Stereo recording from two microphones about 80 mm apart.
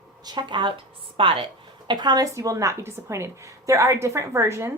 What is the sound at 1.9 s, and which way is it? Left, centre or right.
Speech, right.